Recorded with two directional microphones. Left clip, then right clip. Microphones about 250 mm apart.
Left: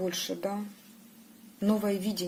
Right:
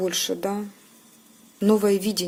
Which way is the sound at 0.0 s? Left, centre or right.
Right.